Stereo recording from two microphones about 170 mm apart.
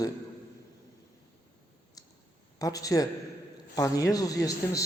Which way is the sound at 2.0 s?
20° left (ahead or behind).